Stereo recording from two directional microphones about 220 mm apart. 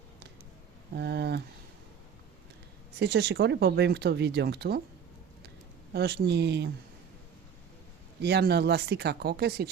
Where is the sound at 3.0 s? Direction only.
50° right (ahead or behind).